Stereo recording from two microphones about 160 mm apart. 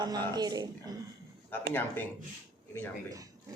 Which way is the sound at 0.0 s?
25° right (ahead or behind).